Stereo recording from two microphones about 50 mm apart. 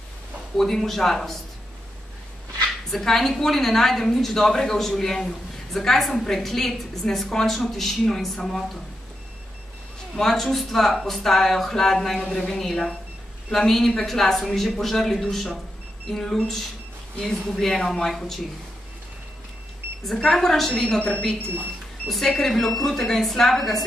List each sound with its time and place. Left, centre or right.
0.6 s speech: centre
2.9 s a woman's voice: centre
10.1 s a woman's voice: centre
20.2 s a woman's voice: centre
20.7 s a woman's voice: left
22.0 s speech: centre